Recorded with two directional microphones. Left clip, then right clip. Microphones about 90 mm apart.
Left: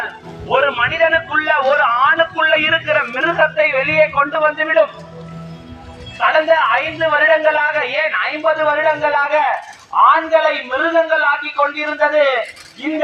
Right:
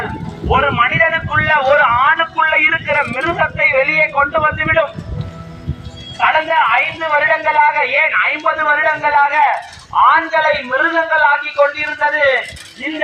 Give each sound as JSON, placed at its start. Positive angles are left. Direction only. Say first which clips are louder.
{"t": 0.4, "sound": "a sound", "louder": "right 2 dB", "side_deg": 50}
{"t": 6.1, "sound": "a man's voice", "louder": "even", "side_deg": 45}
{"t": 10.7, "sound": "a man's voice", "louder": "right 1 dB", "side_deg": 30}